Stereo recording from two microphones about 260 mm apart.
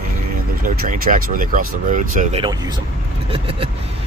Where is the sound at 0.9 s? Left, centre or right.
Right.